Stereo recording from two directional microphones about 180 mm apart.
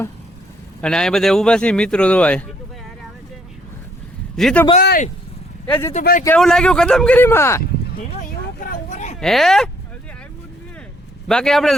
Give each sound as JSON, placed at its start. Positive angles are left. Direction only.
{"t": 0.8, "sound": "speech", "side_deg": 5}
{"t": 4.4, "sound": "a man's voice", "side_deg": 5}
{"t": 4.8, "sound": "speech", "side_deg": 65}
{"t": 5.6, "sound": "speech", "side_deg": 10}
{"t": 5.9, "sound": "speech", "side_deg": 45}
{"t": 6.2, "sound": "speech", "side_deg": 5}
{"t": 8.7, "sound": "a sound", "side_deg": 40}
{"t": 9.2, "sound": "speech", "side_deg": 0}
{"t": 11.3, "sound": "speech", "side_deg": 5}